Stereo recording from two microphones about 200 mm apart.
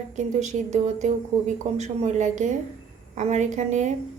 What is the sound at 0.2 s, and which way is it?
A woman's voice, 35° right (ahead or behind).